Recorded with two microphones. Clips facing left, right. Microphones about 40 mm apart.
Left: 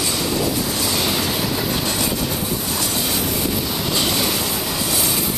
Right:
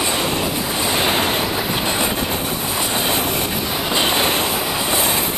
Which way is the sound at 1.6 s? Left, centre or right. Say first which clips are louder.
Right 2 dB; right.